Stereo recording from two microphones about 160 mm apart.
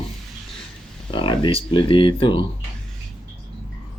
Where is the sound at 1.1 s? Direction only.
30° left (ahead or behind).